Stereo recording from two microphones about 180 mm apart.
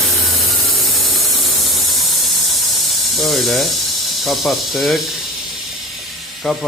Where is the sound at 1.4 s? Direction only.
Centre (ahead or behind).